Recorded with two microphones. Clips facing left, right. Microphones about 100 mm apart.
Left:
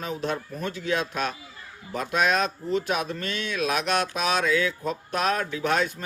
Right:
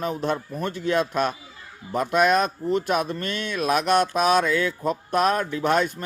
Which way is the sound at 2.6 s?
50° right (ahead or behind).